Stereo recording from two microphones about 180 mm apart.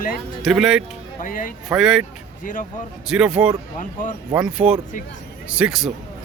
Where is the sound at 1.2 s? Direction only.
50° left (ahead or behind).